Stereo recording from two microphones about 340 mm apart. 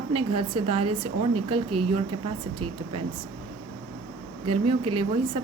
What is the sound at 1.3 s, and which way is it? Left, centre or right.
Speech, right.